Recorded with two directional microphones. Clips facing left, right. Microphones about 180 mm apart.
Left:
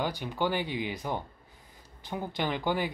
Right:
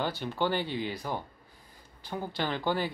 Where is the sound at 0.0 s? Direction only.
15° left (ahead or behind).